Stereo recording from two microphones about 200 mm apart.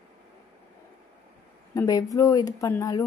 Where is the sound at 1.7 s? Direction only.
15° left (ahead or behind).